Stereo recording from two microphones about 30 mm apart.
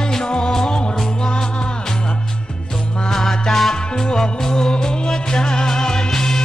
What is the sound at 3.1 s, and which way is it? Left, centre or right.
Music, centre.